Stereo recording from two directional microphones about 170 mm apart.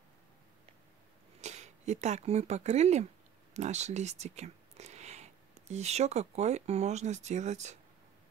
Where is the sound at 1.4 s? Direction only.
40° right (ahead or behind).